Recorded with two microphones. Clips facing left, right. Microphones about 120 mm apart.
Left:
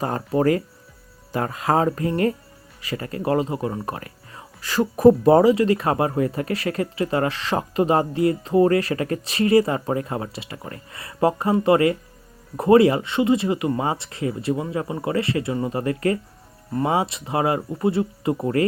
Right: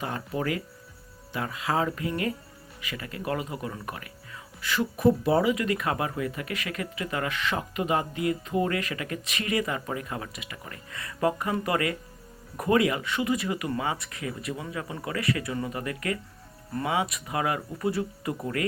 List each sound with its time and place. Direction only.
0.0 s speech: 40° left (ahead or behind)